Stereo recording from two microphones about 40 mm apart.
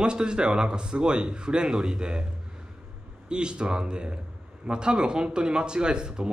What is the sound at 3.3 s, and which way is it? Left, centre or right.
Speech, right.